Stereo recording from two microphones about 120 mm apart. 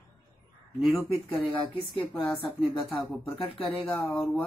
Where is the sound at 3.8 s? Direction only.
5° left (ahead or behind).